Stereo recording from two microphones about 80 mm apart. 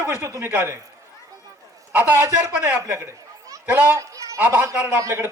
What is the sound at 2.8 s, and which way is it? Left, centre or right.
Speech, right.